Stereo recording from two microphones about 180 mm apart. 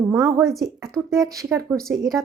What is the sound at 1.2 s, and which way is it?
Speech, 20° right (ahead or behind).